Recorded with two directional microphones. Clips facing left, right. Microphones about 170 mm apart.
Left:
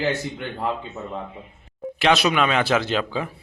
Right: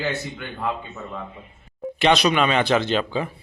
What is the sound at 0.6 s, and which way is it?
Speech, 30° left (ahead or behind).